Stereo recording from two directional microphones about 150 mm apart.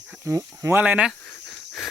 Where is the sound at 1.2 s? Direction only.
15° left (ahead or behind).